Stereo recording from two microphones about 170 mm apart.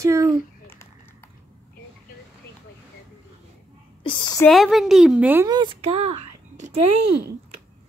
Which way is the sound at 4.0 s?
25° left (ahead or behind).